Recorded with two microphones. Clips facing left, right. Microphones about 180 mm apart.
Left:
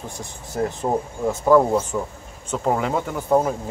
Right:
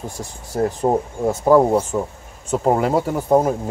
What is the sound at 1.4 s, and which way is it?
Speech, 25° right (ahead or behind).